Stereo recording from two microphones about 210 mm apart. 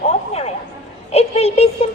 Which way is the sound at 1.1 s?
30° left (ahead or behind).